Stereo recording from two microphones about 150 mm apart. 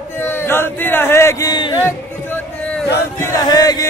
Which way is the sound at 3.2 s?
25° left (ahead or behind).